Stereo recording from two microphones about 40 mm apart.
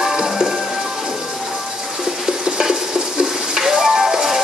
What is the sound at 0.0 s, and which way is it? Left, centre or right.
Music, centre.